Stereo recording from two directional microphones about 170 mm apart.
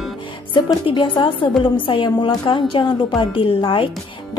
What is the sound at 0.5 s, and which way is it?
Speech, 30° left (ahead or behind).